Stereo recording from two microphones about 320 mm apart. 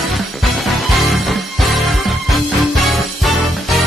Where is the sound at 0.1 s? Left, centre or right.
Centre.